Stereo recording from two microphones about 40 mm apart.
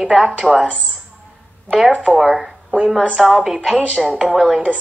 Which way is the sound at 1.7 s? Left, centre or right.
Right.